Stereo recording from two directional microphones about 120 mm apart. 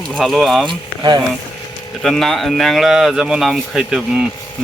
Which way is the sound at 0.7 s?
35° right (ahead or behind).